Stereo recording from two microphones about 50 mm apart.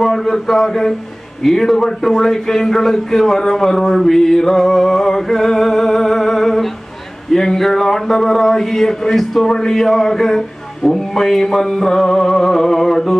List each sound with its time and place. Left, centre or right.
0.0 s speech: centre